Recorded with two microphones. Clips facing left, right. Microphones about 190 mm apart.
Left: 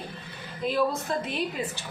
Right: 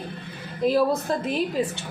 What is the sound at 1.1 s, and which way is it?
Speech, 40° right (ahead or behind).